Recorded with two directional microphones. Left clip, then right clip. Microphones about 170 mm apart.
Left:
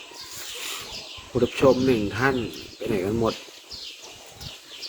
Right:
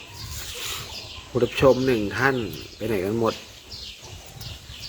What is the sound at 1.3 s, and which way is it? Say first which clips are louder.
Speech: right 1 dB; centre (ahead or behind).